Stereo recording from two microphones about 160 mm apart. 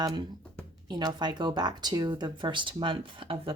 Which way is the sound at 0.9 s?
25° right (ahead or behind).